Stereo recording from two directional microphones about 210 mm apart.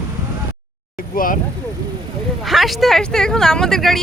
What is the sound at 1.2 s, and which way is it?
Speech, 40° left (ahead or behind).